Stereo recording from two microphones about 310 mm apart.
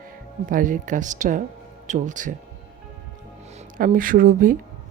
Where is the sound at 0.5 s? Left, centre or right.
Right.